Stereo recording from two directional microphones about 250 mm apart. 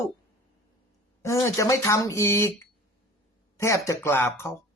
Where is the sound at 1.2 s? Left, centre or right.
Centre.